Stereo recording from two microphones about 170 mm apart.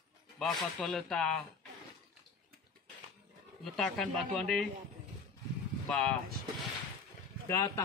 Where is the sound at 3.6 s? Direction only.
5° left (ahead or behind).